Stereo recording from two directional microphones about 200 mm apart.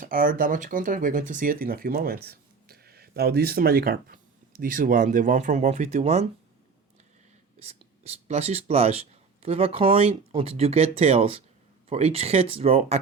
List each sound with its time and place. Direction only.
0.0 s speech: 45° right (ahead or behind)
7.6 s speech: 30° right (ahead or behind)